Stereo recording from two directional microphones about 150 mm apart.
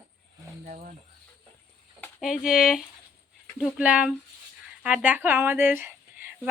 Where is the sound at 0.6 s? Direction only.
50° right (ahead or behind).